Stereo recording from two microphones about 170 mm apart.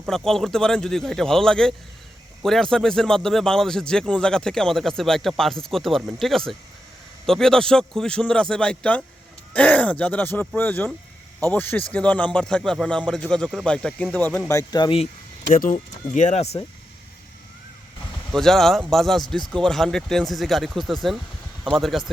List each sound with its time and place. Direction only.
0.1 s speech: centre (ahead or behind)
14.5 s speech: 25° left (ahead or behind)
15.4 s speech: 55° left (ahead or behind)
18.3 s speech: centre (ahead or behind)